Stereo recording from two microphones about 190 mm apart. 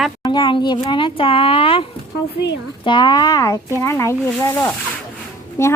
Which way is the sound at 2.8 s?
25° left (ahead or behind).